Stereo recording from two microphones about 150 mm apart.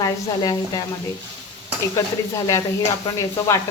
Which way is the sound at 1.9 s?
20° left (ahead or behind).